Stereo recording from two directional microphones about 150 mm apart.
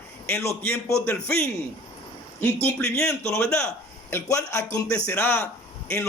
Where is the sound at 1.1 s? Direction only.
10° left (ahead or behind).